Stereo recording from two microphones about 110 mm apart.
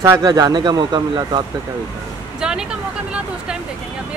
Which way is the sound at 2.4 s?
5° right (ahead or behind).